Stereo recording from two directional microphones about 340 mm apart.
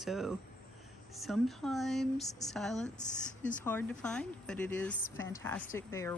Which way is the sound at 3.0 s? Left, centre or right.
Left.